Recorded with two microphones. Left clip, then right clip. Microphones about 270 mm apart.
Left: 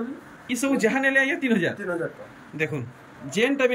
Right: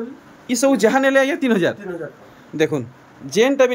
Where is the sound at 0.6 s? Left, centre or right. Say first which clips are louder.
Right 7 dB; centre.